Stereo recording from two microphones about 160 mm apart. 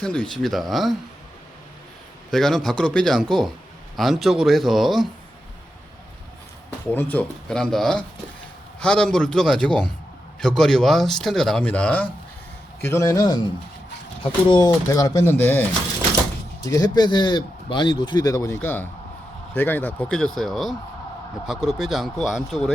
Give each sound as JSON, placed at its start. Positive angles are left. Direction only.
{"t": 0.0, "sound": "speech", "side_deg": 5}
{"t": 2.3, "sound": "speech", "side_deg": 0}
{"t": 6.9, "sound": "a man's voice", "side_deg": 10}
{"t": 14.4, "sound": "a man's voice", "side_deg": 30}
{"t": 16.6, "sound": "a man's voice", "side_deg": 20}